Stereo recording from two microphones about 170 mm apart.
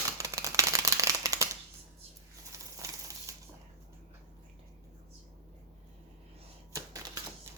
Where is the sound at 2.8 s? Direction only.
20° right (ahead or behind).